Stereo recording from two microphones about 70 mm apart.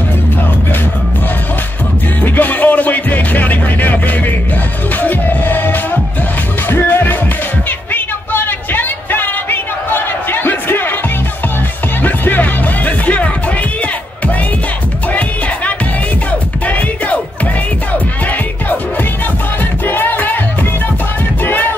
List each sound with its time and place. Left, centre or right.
2.2 s music: left
7.9 s a sound: left
12.0 s music: left
16.3 s music: left
19.9 s music: left
21.5 s music: left